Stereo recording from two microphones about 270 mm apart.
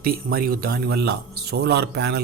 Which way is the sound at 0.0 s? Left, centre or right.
Right.